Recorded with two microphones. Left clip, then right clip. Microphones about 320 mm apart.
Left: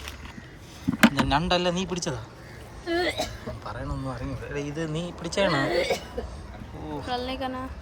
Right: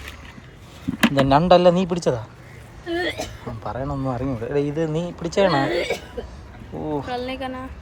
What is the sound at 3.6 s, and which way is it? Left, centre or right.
Speech, centre.